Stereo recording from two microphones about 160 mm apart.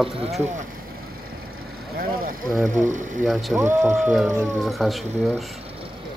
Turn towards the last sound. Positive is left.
turn(degrees=0)  # may be behind; listen again after turning